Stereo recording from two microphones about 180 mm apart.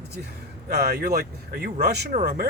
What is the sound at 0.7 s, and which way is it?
Speech, 60° right (ahead or behind).